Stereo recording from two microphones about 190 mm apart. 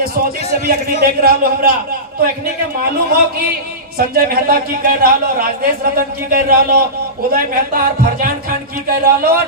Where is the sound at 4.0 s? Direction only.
50° right (ahead or behind).